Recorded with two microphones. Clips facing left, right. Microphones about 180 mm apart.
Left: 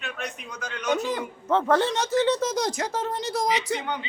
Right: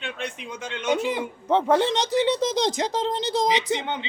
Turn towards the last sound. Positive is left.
turn(degrees=-25)  # may be behind; listen again after turning